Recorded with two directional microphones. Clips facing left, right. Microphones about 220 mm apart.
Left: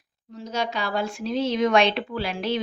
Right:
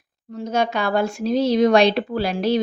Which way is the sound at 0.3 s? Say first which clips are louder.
Right 6 dB; 55° right (ahead or behind).